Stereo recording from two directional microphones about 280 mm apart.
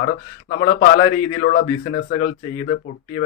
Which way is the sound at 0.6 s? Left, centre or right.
Left.